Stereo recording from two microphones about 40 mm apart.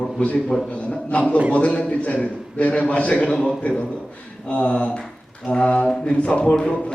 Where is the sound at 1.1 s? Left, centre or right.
Left.